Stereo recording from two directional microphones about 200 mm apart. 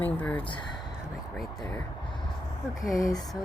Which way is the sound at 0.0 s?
10° left (ahead or behind).